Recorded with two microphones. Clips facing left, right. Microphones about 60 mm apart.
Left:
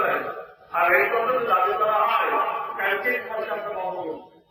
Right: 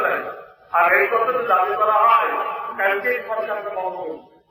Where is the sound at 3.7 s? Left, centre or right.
Right.